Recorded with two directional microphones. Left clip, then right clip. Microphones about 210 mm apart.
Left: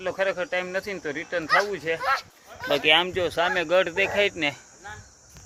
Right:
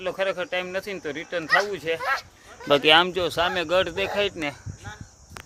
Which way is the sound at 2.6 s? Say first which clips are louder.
Right 3 dB; 40° right (ahead or behind).